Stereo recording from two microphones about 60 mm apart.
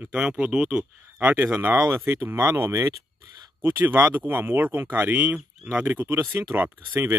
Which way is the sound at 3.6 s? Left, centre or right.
Right.